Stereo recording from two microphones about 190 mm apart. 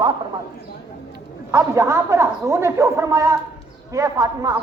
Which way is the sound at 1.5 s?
15° right (ahead or behind).